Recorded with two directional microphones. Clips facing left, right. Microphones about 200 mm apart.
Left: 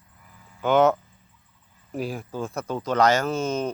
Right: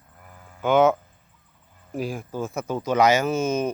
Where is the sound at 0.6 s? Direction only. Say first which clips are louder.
Right 1 dB; centre (ahead or behind).